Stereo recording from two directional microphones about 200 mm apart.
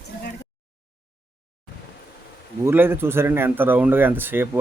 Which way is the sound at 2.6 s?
10° right (ahead or behind).